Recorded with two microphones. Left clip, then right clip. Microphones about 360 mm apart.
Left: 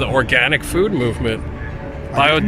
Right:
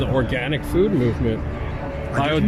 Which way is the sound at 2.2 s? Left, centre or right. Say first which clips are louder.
Left 7 dB; left.